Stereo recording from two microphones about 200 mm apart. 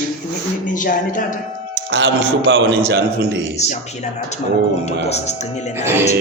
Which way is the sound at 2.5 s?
60° right (ahead or behind).